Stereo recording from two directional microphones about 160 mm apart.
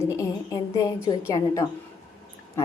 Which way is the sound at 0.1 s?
20° left (ahead or behind).